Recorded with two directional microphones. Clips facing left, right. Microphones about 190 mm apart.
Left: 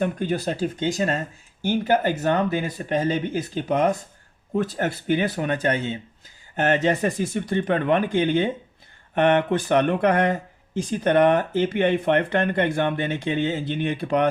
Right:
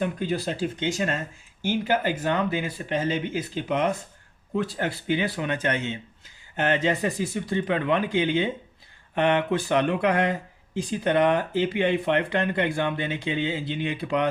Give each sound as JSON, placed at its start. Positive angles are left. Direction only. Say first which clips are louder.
{"t": 0.0, "sound": "speech", "louder": "left 3 dB", "side_deg": 50}